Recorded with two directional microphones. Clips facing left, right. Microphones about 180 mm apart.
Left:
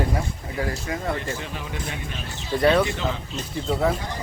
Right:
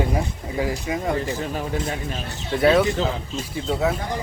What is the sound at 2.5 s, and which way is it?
A man's voice, centre (ahead or behind).